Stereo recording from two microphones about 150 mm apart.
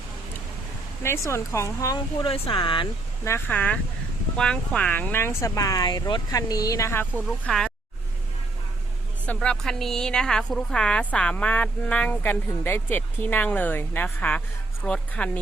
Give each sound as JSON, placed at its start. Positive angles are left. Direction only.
{"t": 1.0, "sound": "speech", "side_deg": 20}
{"t": 2.2, "sound": "speech", "side_deg": 35}
{"t": 3.2, "sound": "speech", "side_deg": 15}
{"t": 9.2, "sound": "speech", "side_deg": 10}